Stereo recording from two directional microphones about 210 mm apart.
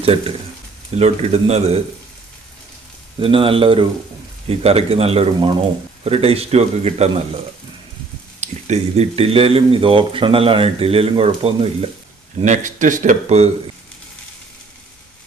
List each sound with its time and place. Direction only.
0.0 s speech: 25° right (ahead or behind)
3.2 s speech: 25° right (ahead or behind)
8.4 s speech: 35° right (ahead or behind)